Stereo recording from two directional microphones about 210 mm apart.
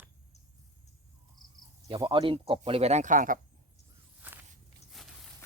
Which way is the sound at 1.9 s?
20° right (ahead or behind).